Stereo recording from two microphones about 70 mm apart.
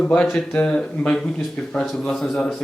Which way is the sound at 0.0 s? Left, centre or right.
Centre.